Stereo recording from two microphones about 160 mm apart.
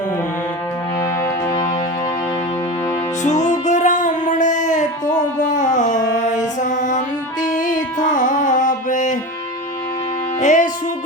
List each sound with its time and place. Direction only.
0.9 s music: 20° left (ahead or behind)
3.2 s music: 50° left (ahead or behind)
5.5 s a sound: 50° left (ahead or behind)
6.6 s mantra: 50° left (ahead or behind)
7.6 s music: 55° left (ahead or behind)
10.4 s music: 50° left (ahead or behind)